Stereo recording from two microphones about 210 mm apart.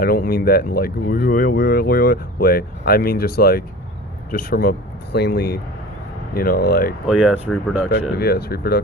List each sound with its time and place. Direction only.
0.0 s speech: 45° left (ahead or behind)
7.1 s speech: 5° right (ahead or behind)
8.1 s speech: 50° left (ahead or behind)